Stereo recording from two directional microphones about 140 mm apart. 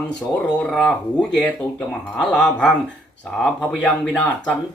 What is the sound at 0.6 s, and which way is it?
Speech, 5° left (ahead or behind).